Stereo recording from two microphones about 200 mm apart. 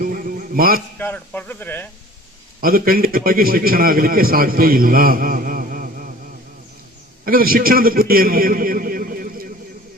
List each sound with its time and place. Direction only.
0.0 s a sound: 45° right (ahead or behind)
0.9 s speech: 10° left (ahead or behind)
2.6 s a man's voice: 45° right (ahead or behind)
7.3 s a man's voice: 45° right (ahead or behind)